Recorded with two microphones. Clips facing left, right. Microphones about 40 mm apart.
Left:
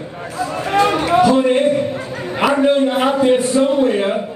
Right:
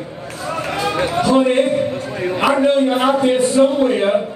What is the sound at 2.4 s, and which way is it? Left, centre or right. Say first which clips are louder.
A man's voice: left 1 dB; centre.